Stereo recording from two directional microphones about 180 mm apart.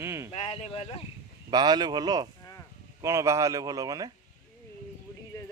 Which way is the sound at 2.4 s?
15° left (ahead or behind).